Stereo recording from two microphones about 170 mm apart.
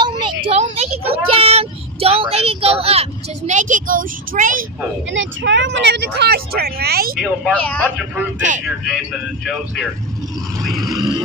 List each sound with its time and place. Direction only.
0.0 s child singing: 25° right (ahead or behind); by 4.6 s 55° right (ahead or behind)
5.1 s speech: 90° right; by 7.2 s 65° right (ahead or behind)
7.5 s speech: 10° left (ahead or behind)
8.5 s speech: 45° right (ahead or behind)
10.8 s vehicle: 25° right (ahead or behind)